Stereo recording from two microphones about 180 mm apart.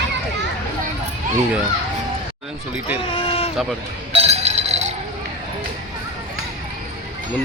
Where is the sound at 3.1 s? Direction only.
30° left (ahead or behind).